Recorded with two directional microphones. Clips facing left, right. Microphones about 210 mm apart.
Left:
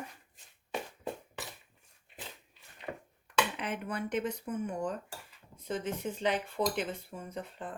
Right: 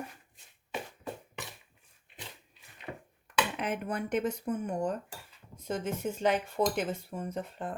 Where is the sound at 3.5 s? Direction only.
50° right (ahead or behind).